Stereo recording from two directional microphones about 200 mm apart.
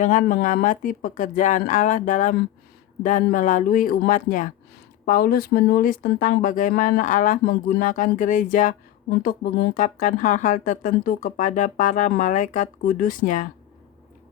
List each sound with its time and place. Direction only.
0.0 s speech: 40° left (ahead or behind)